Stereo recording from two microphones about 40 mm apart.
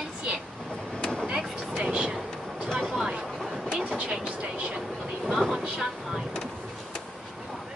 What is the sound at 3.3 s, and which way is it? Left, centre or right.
Vehicle, centre.